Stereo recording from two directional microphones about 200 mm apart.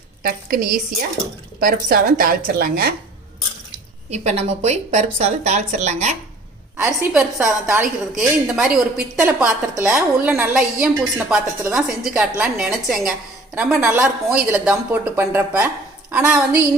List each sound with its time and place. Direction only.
0.2 s a woman's voice: 50° right (ahead or behind)
4.1 s speech: 35° right (ahead or behind)
6.7 s a woman's voice: 5° right (ahead or behind)
8.2 s a woman's voice: 5° right (ahead or behind)